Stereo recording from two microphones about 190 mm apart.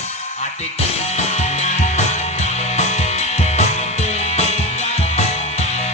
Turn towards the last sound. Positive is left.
turn(degrees=35)  # may be behind; listen again after turning